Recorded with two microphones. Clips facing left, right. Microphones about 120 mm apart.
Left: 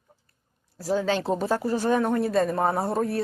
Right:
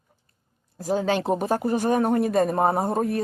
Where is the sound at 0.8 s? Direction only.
45° right (ahead or behind).